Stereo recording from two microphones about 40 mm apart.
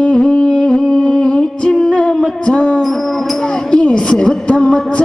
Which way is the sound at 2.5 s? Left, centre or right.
Left.